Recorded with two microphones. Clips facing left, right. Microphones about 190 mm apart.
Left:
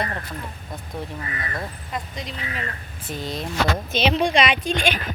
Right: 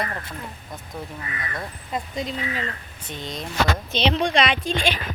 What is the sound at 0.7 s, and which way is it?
Speech, centre (ahead or behind).